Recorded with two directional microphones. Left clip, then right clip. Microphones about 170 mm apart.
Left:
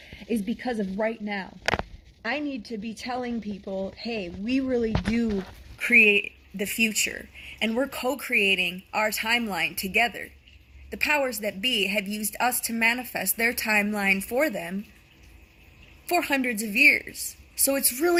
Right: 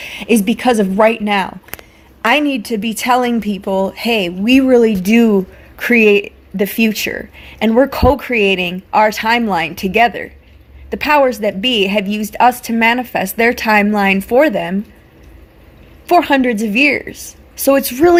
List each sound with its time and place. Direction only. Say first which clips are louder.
0.0 s a woman's voice: right 16 dB; 20° right (ahead or behind)
16.0 s a woman's voice: right 13 dB; 15° right (ahead or behind)